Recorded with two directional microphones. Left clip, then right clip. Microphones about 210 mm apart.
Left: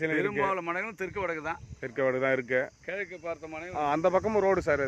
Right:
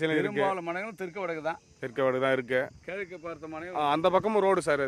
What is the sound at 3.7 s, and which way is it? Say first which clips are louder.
Speech: right 1 dB; 5° right (ahead or behind).